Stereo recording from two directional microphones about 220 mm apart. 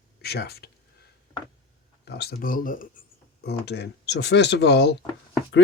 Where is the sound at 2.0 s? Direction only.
45° left (ahead or behind).